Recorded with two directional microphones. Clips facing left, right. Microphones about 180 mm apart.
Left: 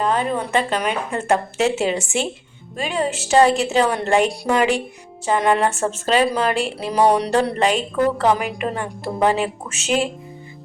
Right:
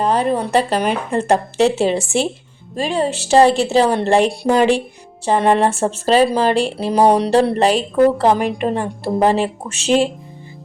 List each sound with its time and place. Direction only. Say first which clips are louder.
0.0 s speech: right 4 dB; 35° right (ahead or behind)